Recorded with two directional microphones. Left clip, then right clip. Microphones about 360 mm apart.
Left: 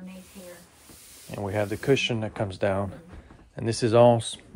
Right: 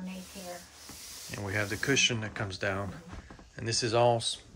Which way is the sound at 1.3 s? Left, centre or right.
Centre.